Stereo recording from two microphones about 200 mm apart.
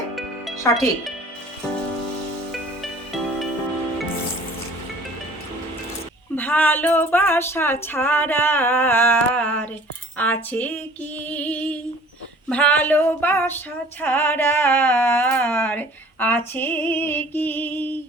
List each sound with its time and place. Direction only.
0.7 s speech: centre (ahead or behind)
2.5 s music: centre (ahead or behind)
6.3 s speech: 10° left (ahead or behind)